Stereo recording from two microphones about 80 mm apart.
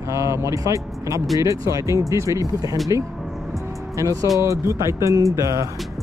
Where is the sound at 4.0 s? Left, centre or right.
Right.